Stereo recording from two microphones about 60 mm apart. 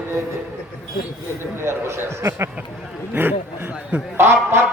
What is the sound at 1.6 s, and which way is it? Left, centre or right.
Speech, right.